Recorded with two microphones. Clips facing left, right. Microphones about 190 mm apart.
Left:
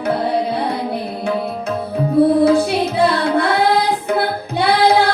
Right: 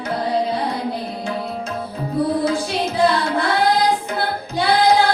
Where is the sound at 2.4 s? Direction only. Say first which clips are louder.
Left 7 dB; 60° left (ahead or behind).